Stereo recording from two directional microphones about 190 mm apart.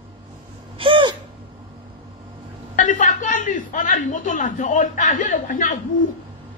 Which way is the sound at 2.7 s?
40° left (ahead or behind).